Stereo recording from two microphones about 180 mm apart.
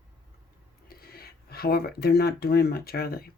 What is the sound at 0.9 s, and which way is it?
Speech, 55° left (ahead or behind).